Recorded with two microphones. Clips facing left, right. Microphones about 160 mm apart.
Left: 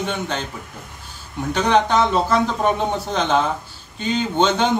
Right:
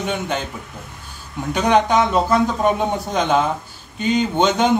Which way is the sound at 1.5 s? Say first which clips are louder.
Right 1 dB; 10° right (ahead or behind).